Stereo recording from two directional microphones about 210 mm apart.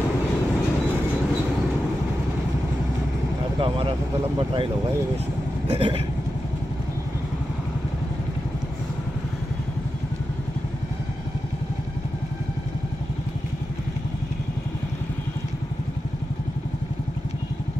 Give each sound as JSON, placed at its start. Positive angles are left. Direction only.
{"t": 3.6, "sound": "speech", "side_deg": -25}
{"t": 5.7, "sound": "vehicle", "side_deg": -25}